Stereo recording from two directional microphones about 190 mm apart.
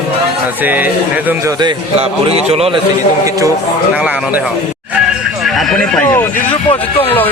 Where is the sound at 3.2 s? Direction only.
15° right (ahead or behind).